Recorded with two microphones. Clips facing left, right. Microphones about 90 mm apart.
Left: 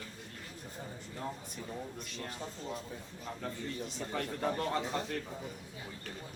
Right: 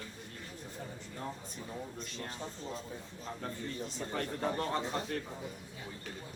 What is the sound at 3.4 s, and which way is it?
Speech, 35° right (ahead or behind).